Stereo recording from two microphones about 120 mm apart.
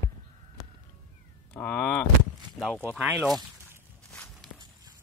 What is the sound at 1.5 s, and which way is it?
Speech, 10° left (ahead or behind).